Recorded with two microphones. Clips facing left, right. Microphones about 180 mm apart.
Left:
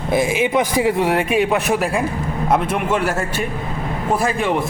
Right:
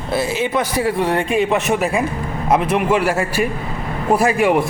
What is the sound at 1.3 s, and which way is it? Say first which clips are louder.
A man's voice: even; centre (ahead or behind).